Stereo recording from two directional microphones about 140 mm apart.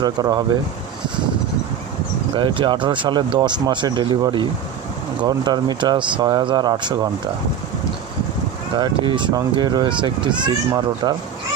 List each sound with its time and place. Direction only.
0.0 s speech: 30° right (ahead or behind)
2.3 s speech: 35° right (ahead or behind)
8.7 s speech: 35° right (ahead or behind)